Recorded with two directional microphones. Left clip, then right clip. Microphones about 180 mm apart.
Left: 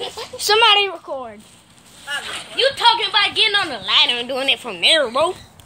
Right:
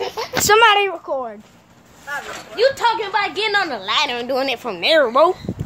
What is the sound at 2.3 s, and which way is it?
A woman's voice, 50° right (ahead or behind).